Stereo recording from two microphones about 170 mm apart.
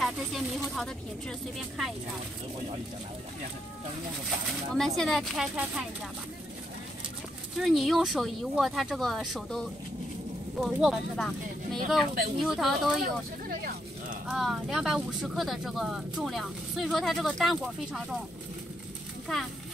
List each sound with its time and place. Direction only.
0.0 s speech: centre (ahead or behind)
4.5 s speech: centre (ahead or behind)
7.5 s speech: centre (ahead or behind)
13.0 s speech: 60° right (ahead or behind)
14.2 s speech: centre (ahead or behind)